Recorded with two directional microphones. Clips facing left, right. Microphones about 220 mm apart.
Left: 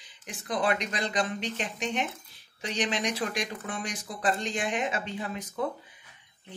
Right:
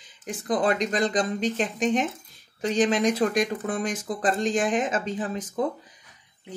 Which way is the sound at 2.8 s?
50° right (ahead or behind).